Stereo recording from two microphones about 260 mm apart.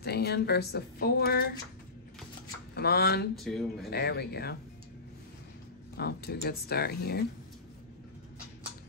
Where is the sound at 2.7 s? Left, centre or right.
Left.